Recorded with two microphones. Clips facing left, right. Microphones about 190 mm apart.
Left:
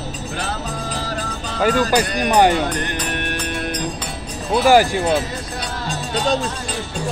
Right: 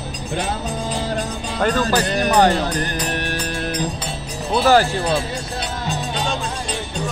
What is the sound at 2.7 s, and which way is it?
Music, 35° right (ahead or behind).